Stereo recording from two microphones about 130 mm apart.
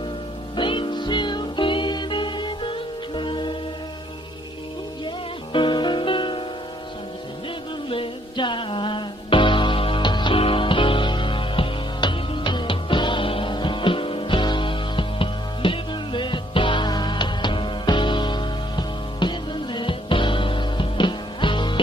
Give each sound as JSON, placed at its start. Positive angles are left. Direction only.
{"t": 0.6, "sound": "music", "side_deg": 40}
{"t": 5.0, "sound": "music", "side_deg": 40}
{"t": 7.9, "sound": "music", "side_deg": 40}